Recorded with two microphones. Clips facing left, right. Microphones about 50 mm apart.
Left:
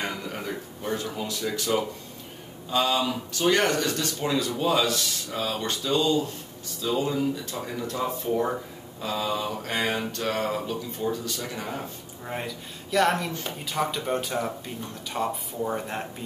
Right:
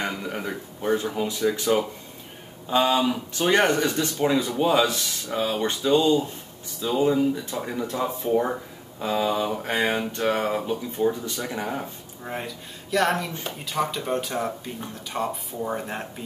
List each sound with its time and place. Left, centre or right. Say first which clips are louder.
0.0 s speech: right 3 dB; centre
12.3 s speech: right 1 dB; centre